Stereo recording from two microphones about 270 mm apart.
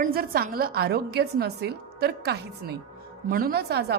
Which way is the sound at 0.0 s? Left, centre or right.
Right.